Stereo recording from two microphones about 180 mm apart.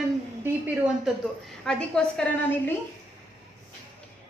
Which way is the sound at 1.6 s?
5° left (ahead or behind).